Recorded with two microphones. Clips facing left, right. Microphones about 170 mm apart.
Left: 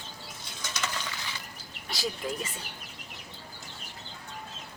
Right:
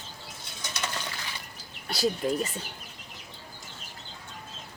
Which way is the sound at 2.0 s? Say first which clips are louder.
Right 7 dB; 40° right (ahead or behind).